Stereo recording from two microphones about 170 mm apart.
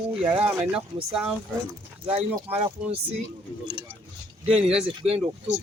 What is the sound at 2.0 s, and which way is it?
Speech, 35° right (ahead or behind).